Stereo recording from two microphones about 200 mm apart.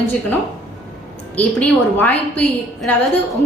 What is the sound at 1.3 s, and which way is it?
A woman's voice, 10° left (ahead or behind).